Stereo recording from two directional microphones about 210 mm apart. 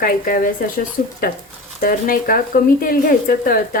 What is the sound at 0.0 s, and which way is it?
Speech, 40° left (ahead or behind).